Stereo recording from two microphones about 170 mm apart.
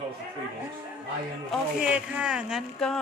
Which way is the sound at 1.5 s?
5° right (ahead or behind).